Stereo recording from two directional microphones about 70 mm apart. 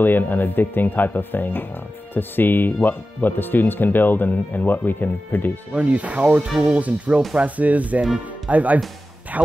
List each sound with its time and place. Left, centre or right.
0.0 s speech: left
5.7 s speech: centre
6.4 s speech: centre
6.8 s speech: right